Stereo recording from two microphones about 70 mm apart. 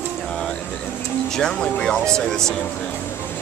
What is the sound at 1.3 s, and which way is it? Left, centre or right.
Speech, centre.